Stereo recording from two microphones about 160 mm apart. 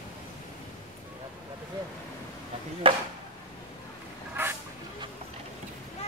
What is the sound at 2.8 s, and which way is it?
Speech, 35° right (ahead or behind).